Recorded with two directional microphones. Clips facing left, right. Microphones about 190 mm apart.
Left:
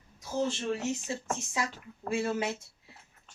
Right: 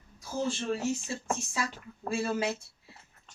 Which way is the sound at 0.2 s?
20° left (ahead or behind).